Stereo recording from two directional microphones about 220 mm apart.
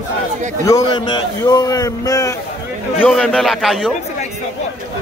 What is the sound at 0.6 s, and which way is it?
A man's voice, 15° left (ahead or behind).